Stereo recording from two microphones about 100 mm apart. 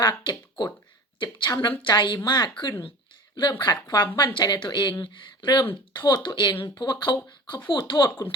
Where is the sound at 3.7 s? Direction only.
45° left (ahead or behind).